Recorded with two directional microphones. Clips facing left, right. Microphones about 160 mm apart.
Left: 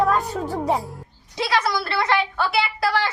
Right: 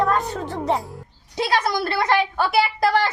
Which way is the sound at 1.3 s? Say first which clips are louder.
Right 1 dB; 45° right (ahead or behind).